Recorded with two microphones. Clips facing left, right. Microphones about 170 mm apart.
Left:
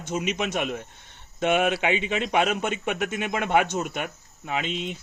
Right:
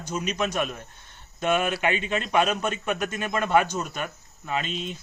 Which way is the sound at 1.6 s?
90° left.